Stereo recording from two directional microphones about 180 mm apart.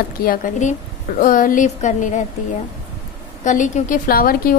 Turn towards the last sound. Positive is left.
turn(degrees=50)  # may be behind; listen again after turning